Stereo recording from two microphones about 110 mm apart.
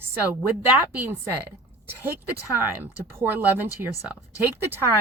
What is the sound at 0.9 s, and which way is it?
Speech, 15° right (ahead or behind).